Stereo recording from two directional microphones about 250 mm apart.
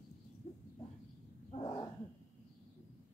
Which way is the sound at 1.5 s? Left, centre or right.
Centre.